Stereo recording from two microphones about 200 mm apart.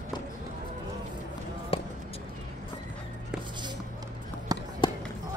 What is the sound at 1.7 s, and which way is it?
Basketball bounce, 30° left (ahead or behind).